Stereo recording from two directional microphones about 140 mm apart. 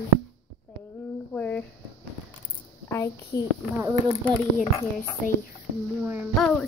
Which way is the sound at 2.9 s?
20° left (ahead or behind).